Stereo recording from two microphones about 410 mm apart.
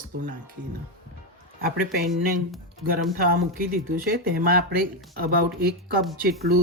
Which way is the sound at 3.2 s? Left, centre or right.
Right.